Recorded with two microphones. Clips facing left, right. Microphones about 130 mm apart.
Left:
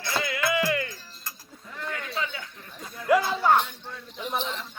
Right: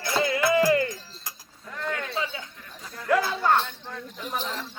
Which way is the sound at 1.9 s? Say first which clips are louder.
Right 2 dB; 30° right (ahead or behind).